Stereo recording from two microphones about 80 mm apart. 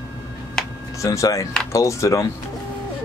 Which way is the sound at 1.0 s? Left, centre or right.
Left.